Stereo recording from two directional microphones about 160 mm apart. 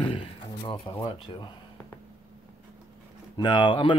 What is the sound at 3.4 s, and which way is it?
Speech, 30° left (ahead or behind).